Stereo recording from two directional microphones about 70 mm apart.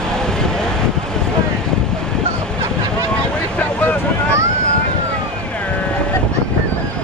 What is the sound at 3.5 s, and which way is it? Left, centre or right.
Boat, centre.